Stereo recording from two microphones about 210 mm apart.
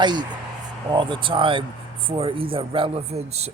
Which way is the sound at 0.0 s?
20° right (ahead or behind).